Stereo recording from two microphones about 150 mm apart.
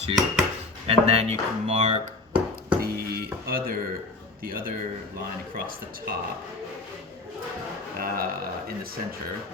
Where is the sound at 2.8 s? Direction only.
90° right.